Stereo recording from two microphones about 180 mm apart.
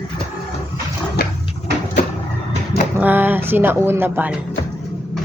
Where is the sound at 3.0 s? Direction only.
10° right (ahead or behind).